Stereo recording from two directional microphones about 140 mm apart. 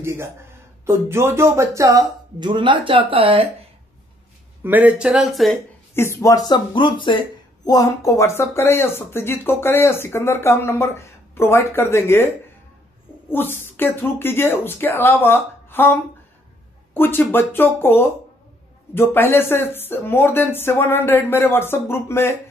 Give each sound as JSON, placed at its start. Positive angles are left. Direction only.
{"t": 0.0, "sound": "speech", "side_deg": -20}
{"t": 2.5, "sound": "speech", "side_deg": -35}
{"t": 4.6, "sound": "speech", "side_deg": -10}
{"t": 5.9, "sound": "speech", "side_deg": 20}
{"t": 13.3, "sound": "speech", "side_deg": 15}